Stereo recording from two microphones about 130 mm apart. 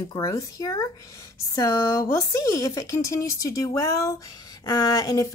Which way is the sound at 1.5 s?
25° left (ahead or behind).